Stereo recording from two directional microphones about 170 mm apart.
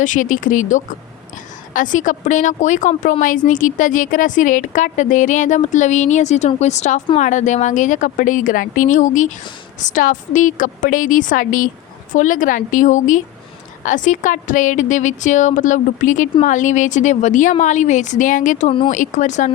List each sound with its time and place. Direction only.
0.0 s a woman's voice: 50° left (ahead or behind)